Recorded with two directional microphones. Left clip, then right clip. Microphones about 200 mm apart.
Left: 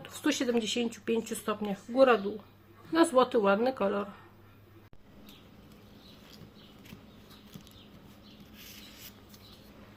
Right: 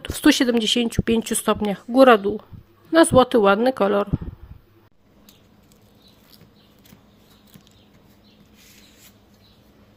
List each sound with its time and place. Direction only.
0.0 s speech: 45° right (ahead or behind)